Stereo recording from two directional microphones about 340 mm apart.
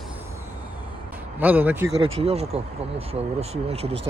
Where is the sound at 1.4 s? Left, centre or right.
Centre.